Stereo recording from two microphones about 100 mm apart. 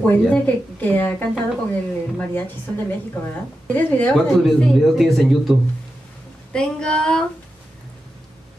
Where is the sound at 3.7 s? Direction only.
15° left (ahead or behind).